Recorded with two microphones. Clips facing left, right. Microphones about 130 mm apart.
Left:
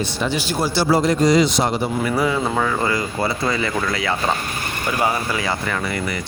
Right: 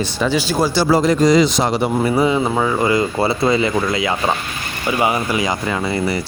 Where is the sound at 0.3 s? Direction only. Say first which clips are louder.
Right 4 dB; 90° right.